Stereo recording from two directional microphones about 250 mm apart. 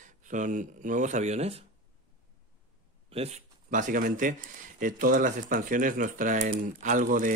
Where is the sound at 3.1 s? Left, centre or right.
Right.